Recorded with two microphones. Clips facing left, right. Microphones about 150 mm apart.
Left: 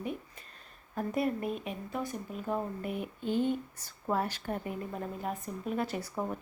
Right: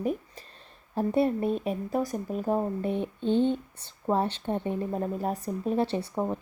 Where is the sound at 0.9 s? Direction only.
30° right (ahead or behind).